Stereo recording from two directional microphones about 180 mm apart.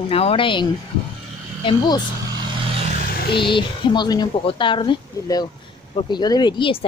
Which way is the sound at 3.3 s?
25° left (ahead or behind).